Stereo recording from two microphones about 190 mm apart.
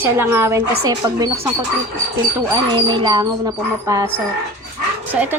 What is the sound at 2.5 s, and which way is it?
Speech, 25° right (ahead or behind).